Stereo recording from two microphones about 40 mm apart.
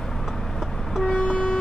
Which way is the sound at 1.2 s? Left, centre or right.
Left.